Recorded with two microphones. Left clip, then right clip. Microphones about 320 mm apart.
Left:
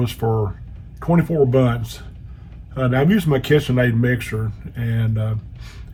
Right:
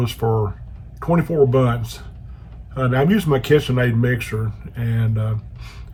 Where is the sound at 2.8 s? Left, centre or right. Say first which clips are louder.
Even; right.